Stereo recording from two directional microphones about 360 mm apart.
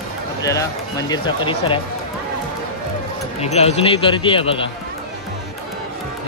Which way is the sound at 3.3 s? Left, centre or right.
Centre.